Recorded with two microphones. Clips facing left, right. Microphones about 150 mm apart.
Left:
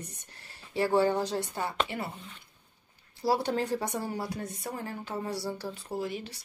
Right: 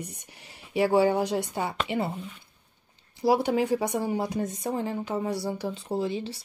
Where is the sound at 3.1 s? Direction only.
15° right (ahead or behind).